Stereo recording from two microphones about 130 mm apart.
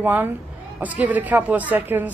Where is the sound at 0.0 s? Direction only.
15° right (ahead or behind).